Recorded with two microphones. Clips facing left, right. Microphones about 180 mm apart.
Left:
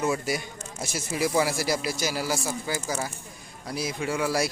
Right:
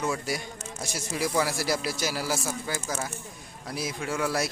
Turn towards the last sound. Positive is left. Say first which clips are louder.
# left 2 dB
turn(degrees=0)  # may be behind; listen again after turning